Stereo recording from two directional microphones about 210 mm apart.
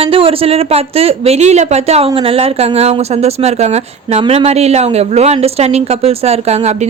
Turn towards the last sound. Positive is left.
turn(degrees=-30)  # may be behind; listen again after turning